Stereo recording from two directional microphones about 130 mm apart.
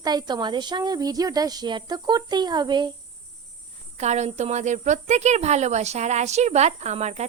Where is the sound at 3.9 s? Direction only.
60° right (ahead or behind).